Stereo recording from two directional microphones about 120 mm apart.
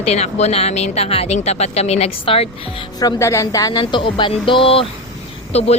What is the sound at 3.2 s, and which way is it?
Speech, 25° left (ahead or behind).